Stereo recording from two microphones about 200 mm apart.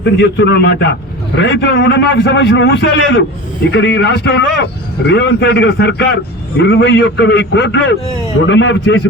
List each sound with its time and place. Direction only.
0.0 s a man's voice: 60° left (ahead or behind)